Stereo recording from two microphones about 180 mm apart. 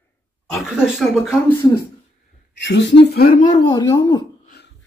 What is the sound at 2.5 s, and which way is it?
Speech, 80° left.